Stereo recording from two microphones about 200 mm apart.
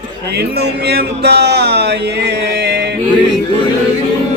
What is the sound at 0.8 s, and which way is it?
Music, 55° right (ahead or behind).